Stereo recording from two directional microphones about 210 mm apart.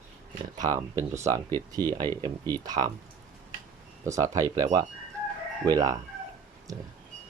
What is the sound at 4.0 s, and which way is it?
Speech, 15° right (ahead or behind).